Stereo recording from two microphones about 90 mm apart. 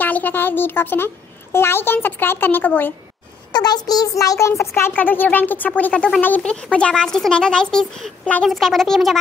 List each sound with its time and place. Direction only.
0.0 s a woman's voice: 20° left (ahead or behind)
3.5 s a woman's voice: 50° left (ahead or behind); by 9.1 s 5° left (ahead or behind)